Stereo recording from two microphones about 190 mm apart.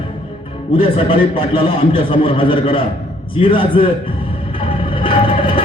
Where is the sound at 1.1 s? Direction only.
30° left (ahead or behind).